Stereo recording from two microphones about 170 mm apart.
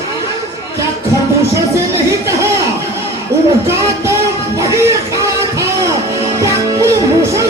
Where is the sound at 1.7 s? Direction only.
15° right (ahead or behind).